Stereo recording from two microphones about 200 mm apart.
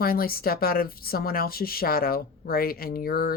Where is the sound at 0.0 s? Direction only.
50° left (ahead or behind).